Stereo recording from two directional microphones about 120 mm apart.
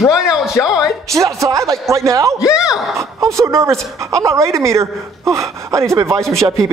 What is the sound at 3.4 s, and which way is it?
Speech, 25° right (ahead or behind).